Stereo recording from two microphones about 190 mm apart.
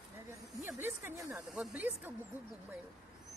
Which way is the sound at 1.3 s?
Centre (ahead or behind).